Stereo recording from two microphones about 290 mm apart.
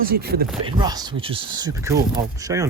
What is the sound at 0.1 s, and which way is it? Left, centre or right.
Chopping, right.